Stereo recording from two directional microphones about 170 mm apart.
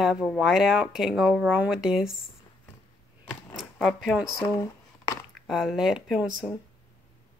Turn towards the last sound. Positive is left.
turn(degrees=-5)  # may be behind; listen again after turning